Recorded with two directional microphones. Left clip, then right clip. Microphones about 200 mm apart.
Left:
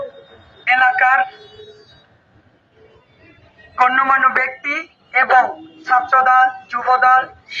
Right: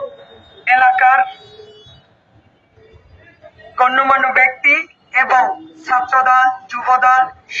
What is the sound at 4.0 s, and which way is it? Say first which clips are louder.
Speech: right 5 dB; 60° right (ahead or behind).